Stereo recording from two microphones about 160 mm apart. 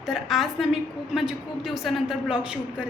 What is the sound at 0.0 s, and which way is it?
A woman's voice, centre (ahead or behind).